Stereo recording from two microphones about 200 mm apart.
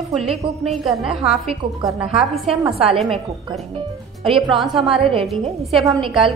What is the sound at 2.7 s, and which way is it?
Speech, 30° right (ahead or behind).